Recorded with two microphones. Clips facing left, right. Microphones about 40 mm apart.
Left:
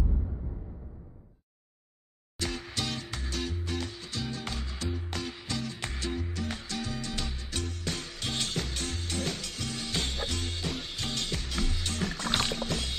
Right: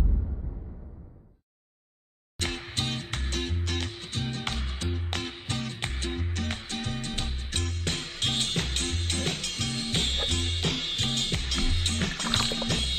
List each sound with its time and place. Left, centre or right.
2.3 s music: right
12.4 s music: right